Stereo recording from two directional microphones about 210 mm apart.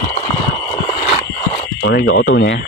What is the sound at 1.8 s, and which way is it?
Speech, 60° left (ahead or behind).